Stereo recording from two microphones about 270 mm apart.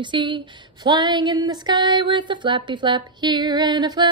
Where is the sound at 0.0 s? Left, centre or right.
Centre.